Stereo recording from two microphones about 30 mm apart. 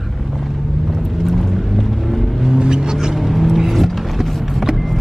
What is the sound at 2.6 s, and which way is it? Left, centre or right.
Vehicle, right.